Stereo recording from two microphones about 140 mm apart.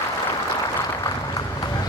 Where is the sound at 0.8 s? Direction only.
25° left (ahead or behind).